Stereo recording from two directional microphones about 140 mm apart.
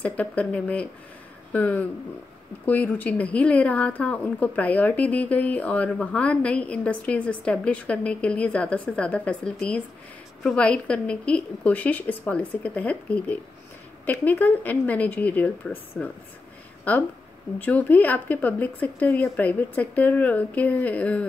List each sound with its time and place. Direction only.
0.0 s speech: 10° left (ahead or behind)
17.6 s speech: 10° left (ahead or behind)